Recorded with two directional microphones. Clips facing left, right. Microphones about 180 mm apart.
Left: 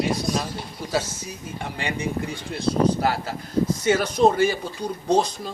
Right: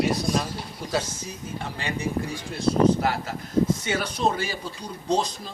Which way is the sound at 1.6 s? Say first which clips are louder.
Left 3 dB; 15° left (ahead or behind).